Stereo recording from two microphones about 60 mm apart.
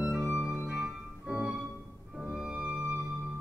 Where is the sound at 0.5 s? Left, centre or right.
Right.